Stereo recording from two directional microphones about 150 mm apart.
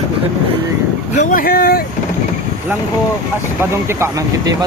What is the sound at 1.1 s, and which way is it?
Speech, 55° left (ahead or behind).